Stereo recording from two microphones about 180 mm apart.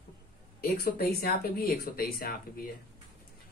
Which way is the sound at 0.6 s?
55° left (ahead or behind).